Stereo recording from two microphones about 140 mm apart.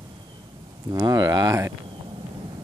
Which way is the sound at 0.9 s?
30° right (ahead or behind).